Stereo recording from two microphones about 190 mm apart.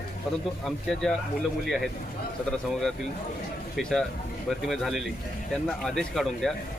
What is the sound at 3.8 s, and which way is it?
Speech, centre (ahead or behind).